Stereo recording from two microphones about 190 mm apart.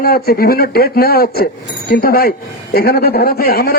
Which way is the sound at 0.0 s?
50° left (ahead or behind).